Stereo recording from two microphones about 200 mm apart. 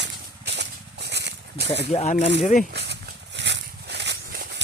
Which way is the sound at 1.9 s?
35° left (ahead or behind).